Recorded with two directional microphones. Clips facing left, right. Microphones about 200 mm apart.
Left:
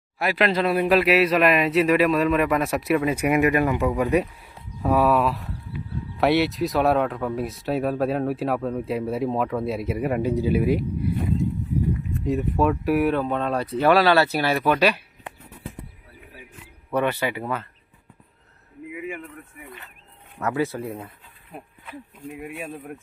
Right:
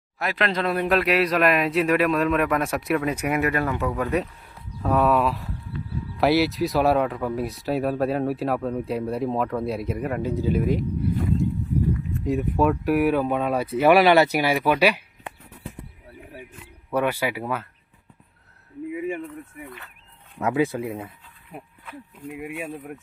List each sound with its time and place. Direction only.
0.2 s a man's voice: 5° left (ahead or behind)
12.2 s speech: centre (ahead or behind)
16.9 s speech: 10° right (ahead or behind)
18.9 s a sound: 35° right (ahead or behind)
20.4 s speech: 15° right (ahead or behind)
22.4 s speech: 10° right (ahead or behind)